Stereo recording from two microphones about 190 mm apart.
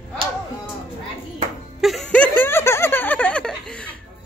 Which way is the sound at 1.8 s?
Centre (ahead or behind).